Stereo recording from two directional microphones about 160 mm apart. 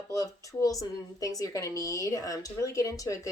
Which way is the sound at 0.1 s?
20° left (ahead or behind).